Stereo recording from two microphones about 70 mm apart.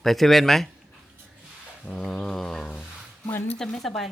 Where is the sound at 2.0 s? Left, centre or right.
Centre.